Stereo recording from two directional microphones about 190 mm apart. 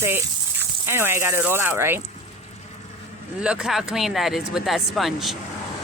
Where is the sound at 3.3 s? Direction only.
5° right (ahead or behind).